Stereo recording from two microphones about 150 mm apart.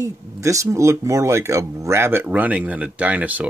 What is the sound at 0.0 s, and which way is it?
Speech, 20° right (ahead or behind).